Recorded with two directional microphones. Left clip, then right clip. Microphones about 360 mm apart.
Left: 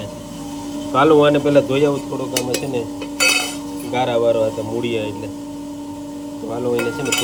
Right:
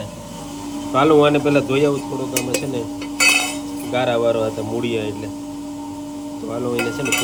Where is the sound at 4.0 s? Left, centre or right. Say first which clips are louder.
Left 2 dB; centre.